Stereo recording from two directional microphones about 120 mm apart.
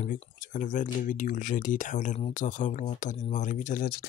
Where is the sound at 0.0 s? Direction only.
90° left.